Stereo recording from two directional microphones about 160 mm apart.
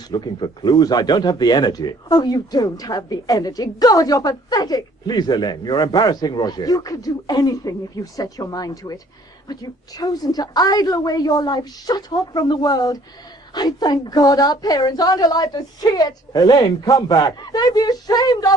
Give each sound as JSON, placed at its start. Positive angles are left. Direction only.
{"t": 0.1, "sound": "speech", "side_deg": 25}